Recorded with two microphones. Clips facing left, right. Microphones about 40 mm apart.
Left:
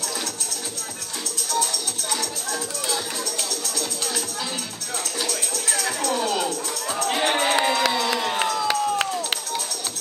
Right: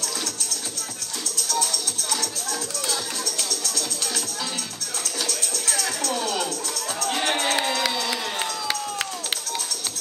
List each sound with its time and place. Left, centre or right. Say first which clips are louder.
1.5 s music: left 2 dB; centre
3.4 s music: even; centre
5.2 s music: even; centre
7.0 s run: left 3 dB; centre
8.6 s run: left 6 dB; left